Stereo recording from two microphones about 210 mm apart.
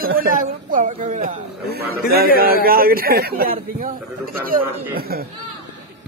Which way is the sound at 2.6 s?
45° right (ahead or behind).